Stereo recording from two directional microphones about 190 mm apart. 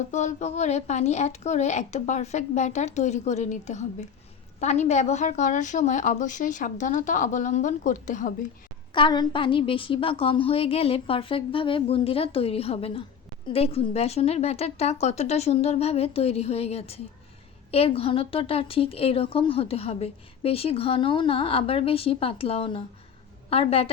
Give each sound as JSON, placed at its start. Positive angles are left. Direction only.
{"t": 0.1, "sound": "a woman's voice", "side_deg": 40}
{"t": 8.9, "sound": "a woman's voice", "side_deg": 25}